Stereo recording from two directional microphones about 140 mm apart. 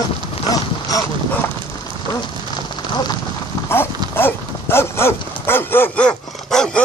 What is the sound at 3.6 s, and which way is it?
Clip-clop, 15° left (ahead or behind).